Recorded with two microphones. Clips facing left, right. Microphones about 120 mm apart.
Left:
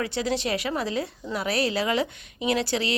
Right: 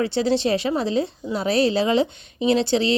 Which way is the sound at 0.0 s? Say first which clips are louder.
Right 6 dB; 30° right (ahead or behind).